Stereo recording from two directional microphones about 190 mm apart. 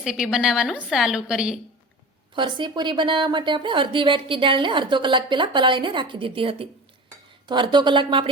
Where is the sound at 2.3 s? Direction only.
25° right (ahead or behind).